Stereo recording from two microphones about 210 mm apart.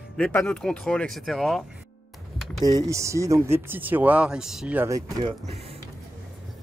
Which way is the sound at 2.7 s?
15° right (ahead or behind).